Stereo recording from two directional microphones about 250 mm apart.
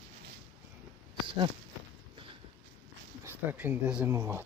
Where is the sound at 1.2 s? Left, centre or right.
Centre.